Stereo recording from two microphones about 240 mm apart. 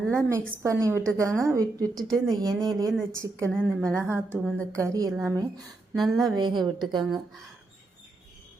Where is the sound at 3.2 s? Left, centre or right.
Centre.